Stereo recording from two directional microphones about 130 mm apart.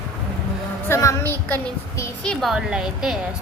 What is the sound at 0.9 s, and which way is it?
Speech, 20° left (ahead or behind).